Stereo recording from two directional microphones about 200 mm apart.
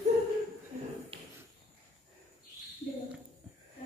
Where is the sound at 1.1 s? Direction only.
30° right (ahead or behind).